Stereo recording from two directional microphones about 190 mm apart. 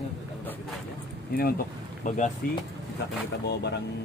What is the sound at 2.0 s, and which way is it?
Speech, 40° left (ahead or behind).